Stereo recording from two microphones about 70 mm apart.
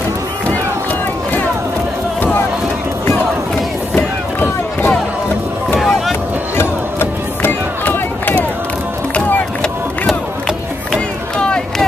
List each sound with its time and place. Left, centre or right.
3.9 s a sound: left
5.8 s boat: centre
6.5 s crowd: left